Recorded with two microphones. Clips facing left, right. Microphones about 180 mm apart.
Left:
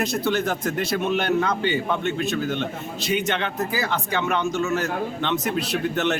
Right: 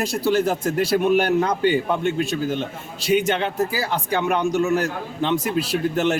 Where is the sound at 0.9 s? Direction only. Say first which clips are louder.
Right 5 dB; 10° right (ahead or behind).